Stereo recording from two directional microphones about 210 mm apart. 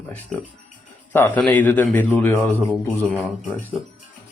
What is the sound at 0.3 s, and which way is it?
A man's voice, 5° left (ahead or behind).